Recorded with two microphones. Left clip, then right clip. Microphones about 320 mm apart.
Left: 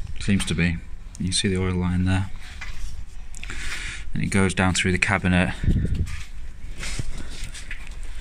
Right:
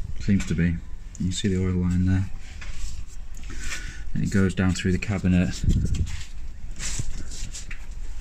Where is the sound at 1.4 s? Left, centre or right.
Left.